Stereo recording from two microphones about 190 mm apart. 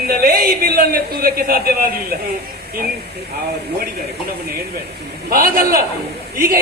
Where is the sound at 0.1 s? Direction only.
50° right (ahead or behind).